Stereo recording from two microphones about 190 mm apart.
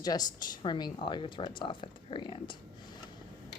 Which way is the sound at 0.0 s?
20° left (ahead or behind).